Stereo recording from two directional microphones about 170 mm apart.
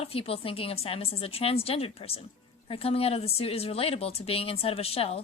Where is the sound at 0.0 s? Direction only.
35° left (ahead or behind).